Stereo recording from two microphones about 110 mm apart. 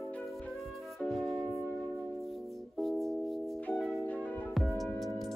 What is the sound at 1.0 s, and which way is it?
Music, centre (ahead or behind).